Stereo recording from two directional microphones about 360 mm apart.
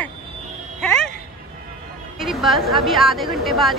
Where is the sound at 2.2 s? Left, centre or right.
Centre.